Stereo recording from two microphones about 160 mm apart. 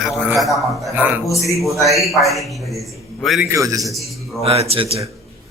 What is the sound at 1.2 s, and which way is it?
Speech, 20° left (ahead or behind).